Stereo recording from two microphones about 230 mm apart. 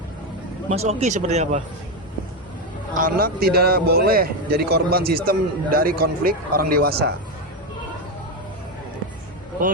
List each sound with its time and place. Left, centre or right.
0.7 s speech: right
2.9 s a man's voice: right